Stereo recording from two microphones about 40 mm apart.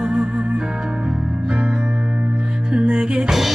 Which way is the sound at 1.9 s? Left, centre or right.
Right.